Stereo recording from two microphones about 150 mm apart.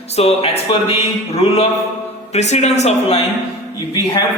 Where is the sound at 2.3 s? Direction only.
45° left (ahead or behind).